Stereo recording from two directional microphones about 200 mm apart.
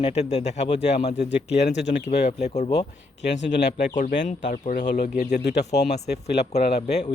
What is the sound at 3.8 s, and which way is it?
Speech, 40° left (ahead or behind).